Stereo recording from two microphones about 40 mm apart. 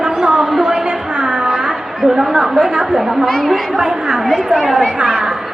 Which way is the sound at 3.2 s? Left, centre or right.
Centre.